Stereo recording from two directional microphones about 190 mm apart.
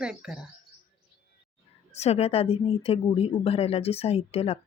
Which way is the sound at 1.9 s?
35° left (ahead or behind).